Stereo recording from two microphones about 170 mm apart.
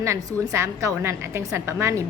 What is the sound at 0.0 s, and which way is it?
A woman's voice, 15° right (ahead or behind).